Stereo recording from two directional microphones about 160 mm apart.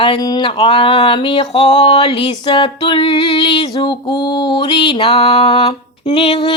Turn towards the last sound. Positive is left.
turn(degrees=35)  # may be behind; listen again after turning